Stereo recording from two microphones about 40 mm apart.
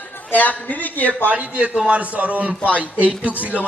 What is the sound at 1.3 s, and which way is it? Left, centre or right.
A man's voice, right.